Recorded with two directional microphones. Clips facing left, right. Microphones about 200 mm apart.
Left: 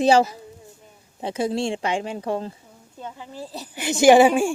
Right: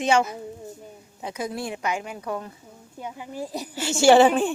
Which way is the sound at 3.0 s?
15° right (ahead or behind).